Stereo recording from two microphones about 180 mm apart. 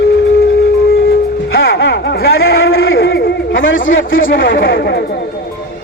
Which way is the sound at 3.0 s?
90° left.